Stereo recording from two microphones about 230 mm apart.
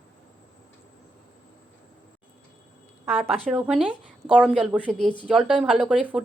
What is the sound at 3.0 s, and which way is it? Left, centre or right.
Speech, centre.